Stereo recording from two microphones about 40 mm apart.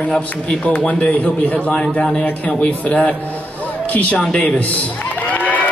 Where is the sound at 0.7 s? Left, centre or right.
Left.